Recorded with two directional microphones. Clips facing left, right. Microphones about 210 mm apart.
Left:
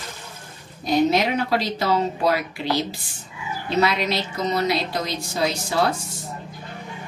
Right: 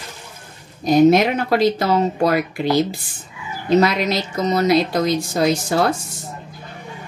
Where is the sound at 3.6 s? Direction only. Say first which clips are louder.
Right 6 dB; 45° right (ahead or behind).